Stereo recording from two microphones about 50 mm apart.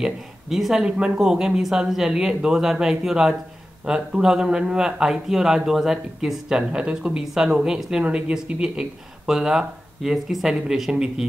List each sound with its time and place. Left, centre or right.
0.0 s speech: centre
0.8 s speech: centre